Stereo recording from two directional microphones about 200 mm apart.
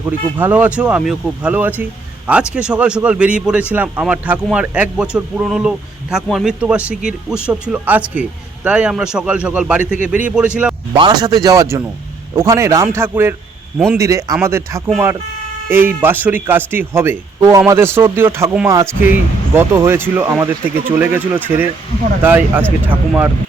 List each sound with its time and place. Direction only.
0.0 s speech: 10° right (ahead or behind)
1.8 s a sound: 10° right (ahead or behind)
2.5 s speech: 5° right (ahead or behind)
10.9 s speech: 25° right (ahead or behind); by 14.0 s 5° right (ahead or behind)
14.0 s speech: 15° right (ahead or behind)